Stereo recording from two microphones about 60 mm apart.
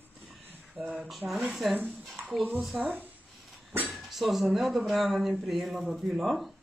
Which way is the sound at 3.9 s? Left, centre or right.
Centre.